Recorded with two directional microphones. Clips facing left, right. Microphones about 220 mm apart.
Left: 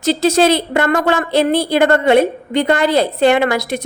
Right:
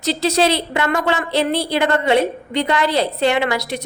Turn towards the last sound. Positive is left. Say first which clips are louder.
# left 4 dB
turn(degrees=50)  # may be behind; listen again after turning